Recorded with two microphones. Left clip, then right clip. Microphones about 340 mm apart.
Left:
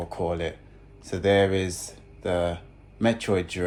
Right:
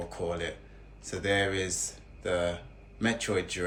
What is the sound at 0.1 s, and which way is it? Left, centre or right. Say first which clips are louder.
Speech: left 7 dB; centre.